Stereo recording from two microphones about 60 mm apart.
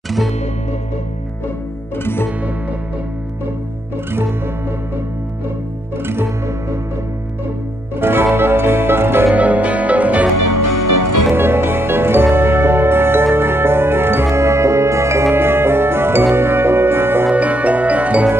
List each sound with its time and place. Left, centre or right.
8.0 s music: right
9.3 s music: right
11.3 s music: right
17.3 s music: right